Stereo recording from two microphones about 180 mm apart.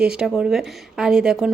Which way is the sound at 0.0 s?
5° right (ahead or behind).